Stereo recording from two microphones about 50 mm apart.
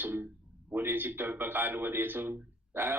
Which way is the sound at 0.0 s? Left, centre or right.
Right.